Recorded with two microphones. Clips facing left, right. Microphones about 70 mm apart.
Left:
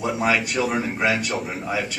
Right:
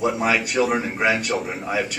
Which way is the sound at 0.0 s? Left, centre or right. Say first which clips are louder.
Right 1 dB; centre.